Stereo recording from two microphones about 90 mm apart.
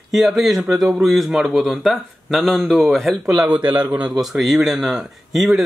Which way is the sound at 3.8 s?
20° right (ahead or behind).